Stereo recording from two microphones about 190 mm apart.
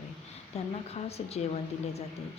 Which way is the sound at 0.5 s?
35° left (ahead or behind).